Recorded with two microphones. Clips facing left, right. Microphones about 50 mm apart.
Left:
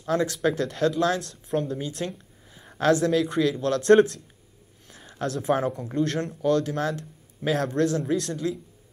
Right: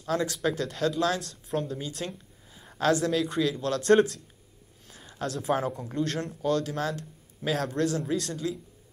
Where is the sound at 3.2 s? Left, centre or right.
Left.